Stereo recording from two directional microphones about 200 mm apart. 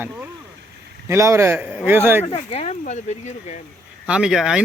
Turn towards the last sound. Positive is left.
turn(degrees=0)  # may be behind; listen again after turning